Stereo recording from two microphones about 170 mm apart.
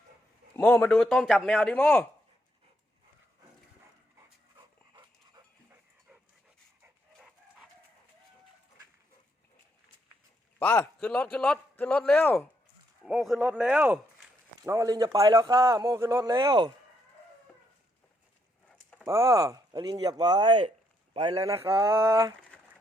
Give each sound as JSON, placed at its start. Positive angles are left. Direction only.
{"t": 0.5, "sound": "speech", "side_deg": 10}
{"t": 10.6, "sound": "a man's voice", "side_deg": 10}
{"t": 13.3, "sound": "a sound", "side_deg": -10}
{"t": 14.6, "sound": "a man's voice", "side_deg": -20}
{"t": 18.9, "sound": "speech", "side_deg": -15}
{"t": 21.6, "sound": "a sound", "side_deg": -15}